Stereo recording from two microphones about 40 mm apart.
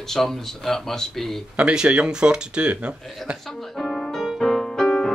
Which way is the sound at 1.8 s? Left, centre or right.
Right.